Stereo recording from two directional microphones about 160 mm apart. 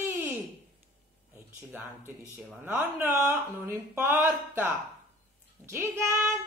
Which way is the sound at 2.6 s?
10° right (ahead or behind).